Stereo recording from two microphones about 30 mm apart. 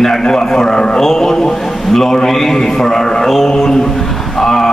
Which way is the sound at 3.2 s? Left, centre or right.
Centre.